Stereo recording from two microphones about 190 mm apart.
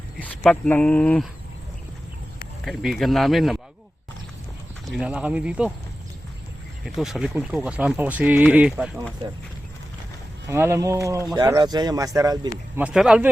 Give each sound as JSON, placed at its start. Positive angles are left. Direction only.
{"t": 0.2, "sound": "speech", "side_deg": 10}
{"t": 2.6, "sound": "speech", "side_deg": 0}
{"t": 4.9, "sound": "speech", "side_deg": -5}
{"t": 6.8, "sound": "speech", "side_deg": 0}
{"t": 10.5, "sound": "speech", "side_deg": -15}